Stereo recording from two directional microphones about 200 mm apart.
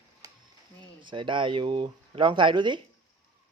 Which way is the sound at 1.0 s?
25° right (ahead or behind).